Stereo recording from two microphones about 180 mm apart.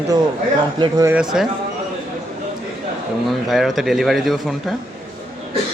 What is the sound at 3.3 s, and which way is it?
Speech, centre (ahead or behind).